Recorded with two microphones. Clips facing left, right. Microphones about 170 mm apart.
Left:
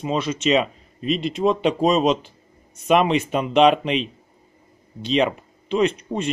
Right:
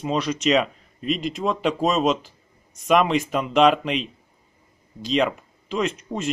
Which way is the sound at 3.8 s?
Centre (ahead or behind).